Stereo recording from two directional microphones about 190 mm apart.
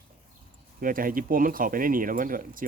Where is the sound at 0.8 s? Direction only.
45° right (ahead or behind).